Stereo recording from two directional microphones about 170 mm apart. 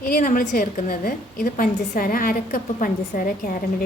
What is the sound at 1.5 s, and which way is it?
A woman's voice, 50° left (ahead or behind).